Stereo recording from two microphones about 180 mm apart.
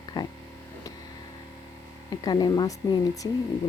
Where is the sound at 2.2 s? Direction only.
25° left (ahead or behind).